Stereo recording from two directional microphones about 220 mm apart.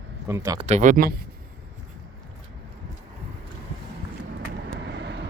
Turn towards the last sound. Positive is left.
turn(degrees=-50)  # may be behind; listen again after turning